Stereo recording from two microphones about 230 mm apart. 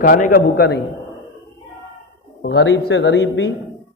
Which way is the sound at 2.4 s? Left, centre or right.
Left.